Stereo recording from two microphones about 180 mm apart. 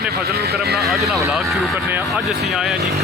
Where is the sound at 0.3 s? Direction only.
60° right (ahead or behind).